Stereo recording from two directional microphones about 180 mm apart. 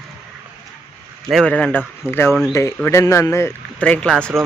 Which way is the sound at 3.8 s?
5° left (ahead or behind).